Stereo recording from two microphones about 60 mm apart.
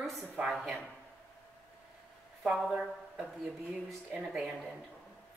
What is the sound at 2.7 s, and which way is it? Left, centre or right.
Speech, centre.